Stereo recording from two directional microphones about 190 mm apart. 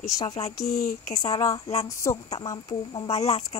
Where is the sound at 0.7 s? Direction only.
35° left (ahead or behind).